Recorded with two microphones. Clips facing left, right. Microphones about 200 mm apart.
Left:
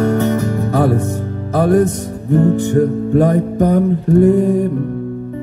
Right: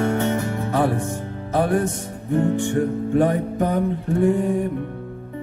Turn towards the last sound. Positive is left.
turn(degrees=40)  # may be behind; listen again after turning